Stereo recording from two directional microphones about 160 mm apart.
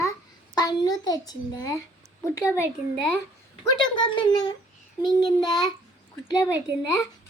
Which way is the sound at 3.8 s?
30° left (ahead or behind).